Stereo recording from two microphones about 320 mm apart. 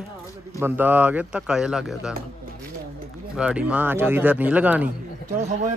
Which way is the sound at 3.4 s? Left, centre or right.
Centre.